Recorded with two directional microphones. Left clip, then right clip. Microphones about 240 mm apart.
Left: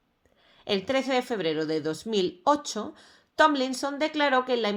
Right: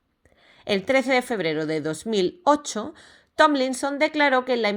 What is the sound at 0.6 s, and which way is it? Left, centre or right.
A woman's voice, right.